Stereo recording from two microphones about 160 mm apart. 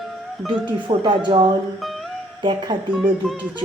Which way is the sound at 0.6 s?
35° right (ahead or behind).